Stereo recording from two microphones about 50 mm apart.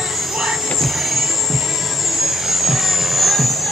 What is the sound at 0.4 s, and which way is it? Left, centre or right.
Vehicle, centre.